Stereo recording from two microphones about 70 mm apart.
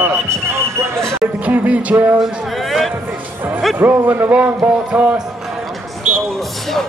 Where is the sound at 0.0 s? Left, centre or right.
Right.